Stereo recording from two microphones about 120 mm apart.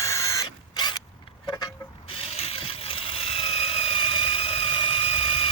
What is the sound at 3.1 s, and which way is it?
Engine, 55° left (ahead or behind).